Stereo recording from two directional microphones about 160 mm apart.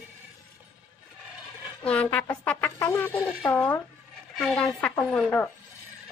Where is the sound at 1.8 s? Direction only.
5° left (ahead or behind).